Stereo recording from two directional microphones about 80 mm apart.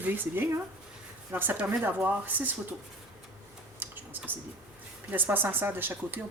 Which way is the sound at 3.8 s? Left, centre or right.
Right.